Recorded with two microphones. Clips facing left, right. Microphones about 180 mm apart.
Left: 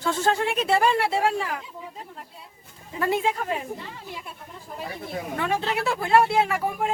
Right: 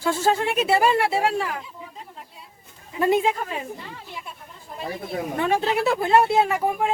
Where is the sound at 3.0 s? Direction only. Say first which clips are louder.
Right 4 dB; 20° right (ahead or behind).